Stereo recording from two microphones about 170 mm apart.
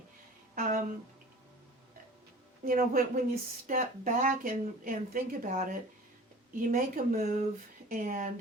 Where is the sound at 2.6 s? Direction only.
55° right (ahead or behind).